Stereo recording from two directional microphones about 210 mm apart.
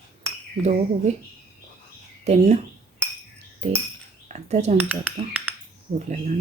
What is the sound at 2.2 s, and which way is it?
Speech, 30° right (ahead or behind).